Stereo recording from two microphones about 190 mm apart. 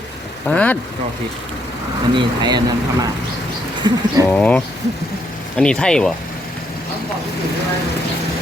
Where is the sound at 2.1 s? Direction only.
25° right (ahead or behind).